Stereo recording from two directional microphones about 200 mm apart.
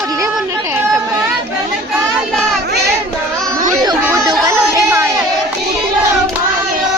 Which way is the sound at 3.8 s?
20° right (ahead or behind).